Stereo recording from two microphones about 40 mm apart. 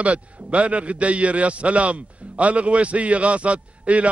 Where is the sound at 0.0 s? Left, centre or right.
Right.